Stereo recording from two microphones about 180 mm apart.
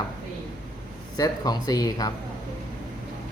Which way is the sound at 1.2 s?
20° left (ahead or behind).